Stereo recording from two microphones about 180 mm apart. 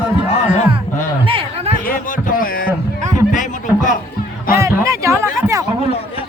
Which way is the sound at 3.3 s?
45° left (ahead or behind).